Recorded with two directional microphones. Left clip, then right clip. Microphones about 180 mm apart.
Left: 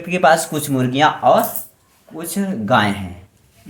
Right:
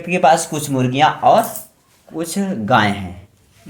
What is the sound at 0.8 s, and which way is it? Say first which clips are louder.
Speech: right 1 dB; 10° right (ahead or behind).